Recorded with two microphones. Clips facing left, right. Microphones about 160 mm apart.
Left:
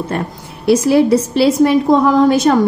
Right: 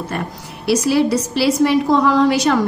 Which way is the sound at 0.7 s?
50° left (ahead or behind).